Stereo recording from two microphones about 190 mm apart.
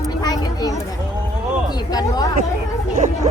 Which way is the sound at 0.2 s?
20° left (ahead or behind).